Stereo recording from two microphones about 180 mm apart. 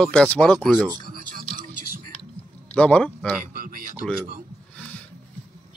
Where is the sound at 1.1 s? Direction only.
50° right (ahead or behind).